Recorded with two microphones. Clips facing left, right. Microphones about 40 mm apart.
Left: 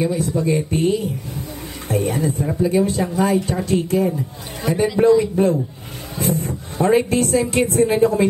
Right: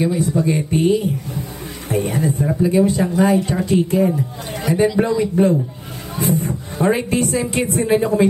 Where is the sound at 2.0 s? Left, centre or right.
Centre.